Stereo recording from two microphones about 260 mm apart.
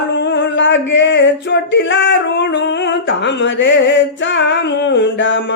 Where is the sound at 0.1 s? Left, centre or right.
Left.